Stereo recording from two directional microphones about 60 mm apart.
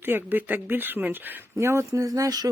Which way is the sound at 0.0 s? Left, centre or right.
Right.